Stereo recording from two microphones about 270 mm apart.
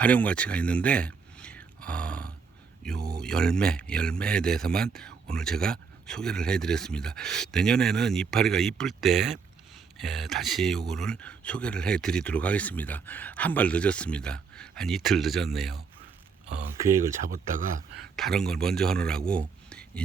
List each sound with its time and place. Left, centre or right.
0.0 s speech: centre
17.2 s speech: right
18.2 s a man's voice: centre